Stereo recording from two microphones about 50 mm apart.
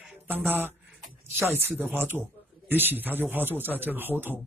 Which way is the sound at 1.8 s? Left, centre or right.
Right.